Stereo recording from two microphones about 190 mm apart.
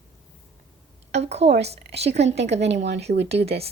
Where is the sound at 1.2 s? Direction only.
35° right (ahead or behind).